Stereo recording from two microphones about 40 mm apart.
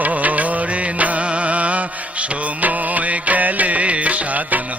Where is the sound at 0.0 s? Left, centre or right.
Right.